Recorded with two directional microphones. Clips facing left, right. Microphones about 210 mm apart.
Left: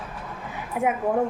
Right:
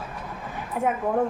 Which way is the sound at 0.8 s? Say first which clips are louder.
Left 1 dB; 5° left (ahead or behind).